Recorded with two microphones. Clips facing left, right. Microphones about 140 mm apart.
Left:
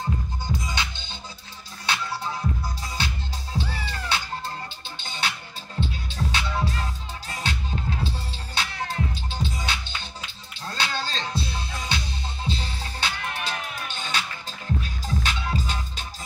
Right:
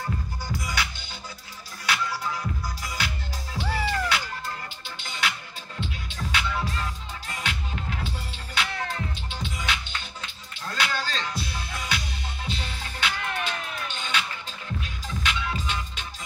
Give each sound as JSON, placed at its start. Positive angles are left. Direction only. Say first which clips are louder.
{"t": 0.0, "sound": "music", "louder": "left 2 dB", "side_deg": 20}